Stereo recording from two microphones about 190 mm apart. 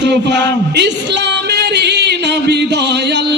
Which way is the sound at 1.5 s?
60° right (ahead or behind).